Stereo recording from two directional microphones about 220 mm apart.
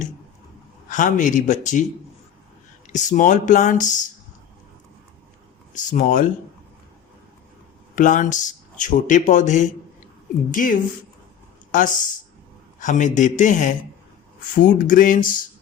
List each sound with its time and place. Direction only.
0.9 s speech: 35° left (ahead or behind)
2.8 s speech: 35° left (ahead or behind)
5.7 s speech: 35° left (ahead or behind)
7.9 s speech: 35° left (ahead or behind)